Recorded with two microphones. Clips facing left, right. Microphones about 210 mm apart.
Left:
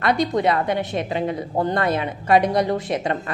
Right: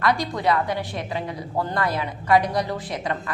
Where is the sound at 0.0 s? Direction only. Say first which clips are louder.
Left 3 dB; 20° left (ahead or behind).